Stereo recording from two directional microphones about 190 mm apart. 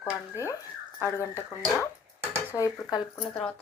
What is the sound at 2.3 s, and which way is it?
Speech, 15° left (ahead or behind).